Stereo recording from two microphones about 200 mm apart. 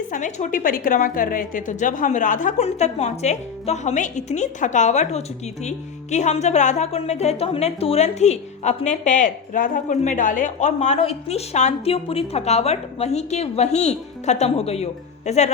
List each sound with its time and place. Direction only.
0.1 s a woman's voice: 35° left (ahead or behind)